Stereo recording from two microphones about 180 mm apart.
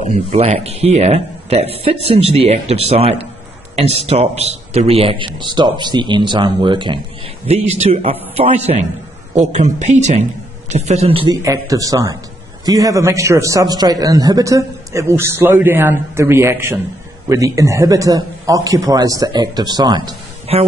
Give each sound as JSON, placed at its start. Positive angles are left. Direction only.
{"t": 0.0, "sound": "a man's voice", "side_deg": -35}
{"t": 11.4, "sound": "a man's voice", "side_deg": -20}
{"t": 20.5, "sound": "speech", "side_deg": -35}